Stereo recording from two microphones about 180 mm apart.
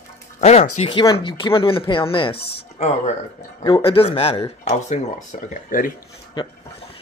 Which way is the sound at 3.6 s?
30° left (ahead or behind).